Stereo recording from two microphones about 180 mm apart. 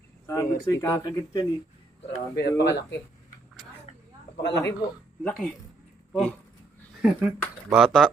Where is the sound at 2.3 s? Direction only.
70° left (ahead or behind).